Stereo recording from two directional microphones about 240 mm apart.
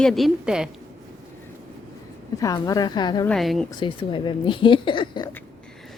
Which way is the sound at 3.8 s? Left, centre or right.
Left.